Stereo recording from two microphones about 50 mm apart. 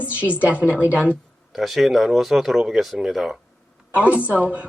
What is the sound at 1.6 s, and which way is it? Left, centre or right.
Speech, centre.